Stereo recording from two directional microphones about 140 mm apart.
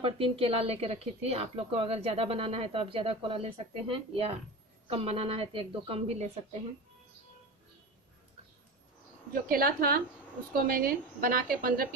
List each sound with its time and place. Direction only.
0.0 s a woman's voice: 45° right (ahead or behind)
9.3 s a woman's voice: 90° right